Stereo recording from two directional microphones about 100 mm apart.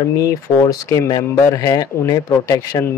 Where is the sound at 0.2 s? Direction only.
35° left (ahead or behind).